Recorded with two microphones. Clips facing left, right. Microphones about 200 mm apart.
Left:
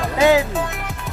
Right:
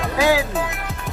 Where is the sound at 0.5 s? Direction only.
Centre (ahead or behind).